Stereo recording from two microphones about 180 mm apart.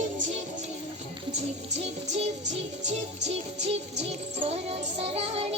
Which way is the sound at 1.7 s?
35° right (ahead or behind).